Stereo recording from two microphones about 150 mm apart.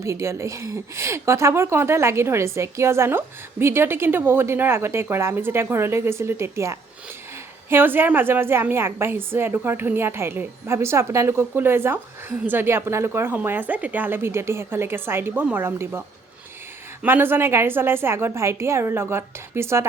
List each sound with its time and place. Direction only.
0.0 s a woman's voice: 20° right (ahead or behind)